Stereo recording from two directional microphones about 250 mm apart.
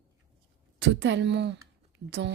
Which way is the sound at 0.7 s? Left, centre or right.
Right.